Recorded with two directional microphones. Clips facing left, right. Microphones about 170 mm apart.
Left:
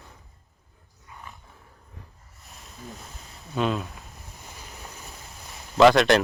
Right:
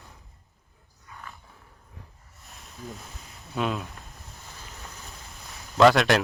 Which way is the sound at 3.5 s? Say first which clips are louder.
Left 3 dB; centre (ahead or behind).